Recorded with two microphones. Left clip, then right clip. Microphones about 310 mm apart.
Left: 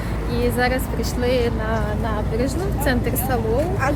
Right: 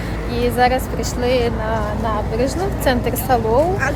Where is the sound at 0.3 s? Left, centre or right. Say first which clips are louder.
Right 5 dB; centre.